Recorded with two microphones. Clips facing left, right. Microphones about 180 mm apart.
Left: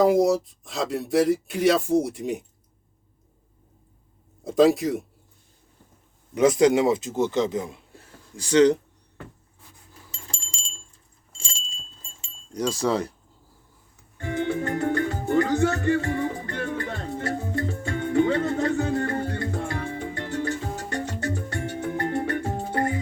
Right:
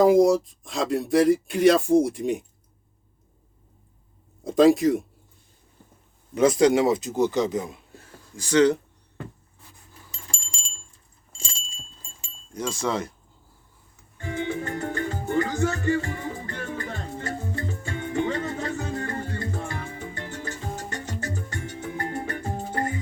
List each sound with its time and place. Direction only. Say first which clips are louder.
0.0 s speech: right 2 dB; 5° left (ahead or behind)
4.4 s speech: right 2 dB; 5° left (ahead or behind)
6.3 s speech: even; 20° left (ahead or behind)
8.4 s speech: left 1 dB; 35° left (ahead or behind)
10.1 s a sound: left 1 dB; 30° left (ahead or behind)
12.5 s speech: left 3 dB; 35° left (ahead or behind)
14.2 s music: left 3 dB; 65° left (ahead or behind)